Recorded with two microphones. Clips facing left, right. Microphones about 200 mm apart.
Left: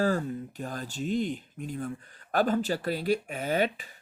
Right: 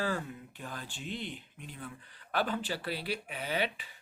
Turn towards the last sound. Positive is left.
turn(degrees=45)  # may be behind; listen again after turning